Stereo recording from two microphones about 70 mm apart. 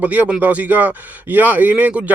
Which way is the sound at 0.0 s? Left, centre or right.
Right.